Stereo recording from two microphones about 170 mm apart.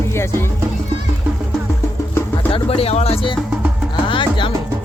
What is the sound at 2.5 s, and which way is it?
Speech, 35° left (ahead or behind).